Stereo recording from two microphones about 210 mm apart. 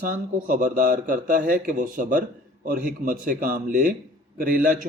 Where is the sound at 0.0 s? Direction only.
40° right (ahead or behind).